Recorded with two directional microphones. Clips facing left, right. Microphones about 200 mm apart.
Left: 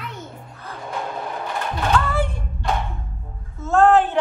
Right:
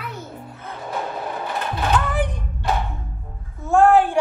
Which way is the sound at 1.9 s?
15° right (ahead or behind).